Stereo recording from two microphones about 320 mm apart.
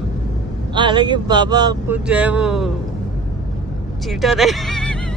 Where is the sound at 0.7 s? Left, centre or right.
Centre.